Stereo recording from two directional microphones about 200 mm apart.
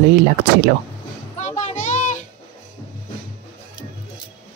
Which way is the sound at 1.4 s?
35° left (ahead or behind).